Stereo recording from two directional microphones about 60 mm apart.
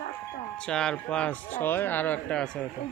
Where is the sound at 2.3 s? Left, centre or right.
Centre.